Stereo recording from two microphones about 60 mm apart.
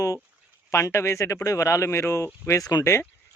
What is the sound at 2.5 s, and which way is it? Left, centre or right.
Speech, left.